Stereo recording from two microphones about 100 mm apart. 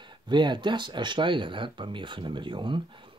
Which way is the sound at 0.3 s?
50° right (ahead or behind).